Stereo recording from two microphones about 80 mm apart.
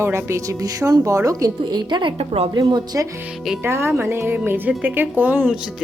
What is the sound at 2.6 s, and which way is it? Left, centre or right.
Speech, right.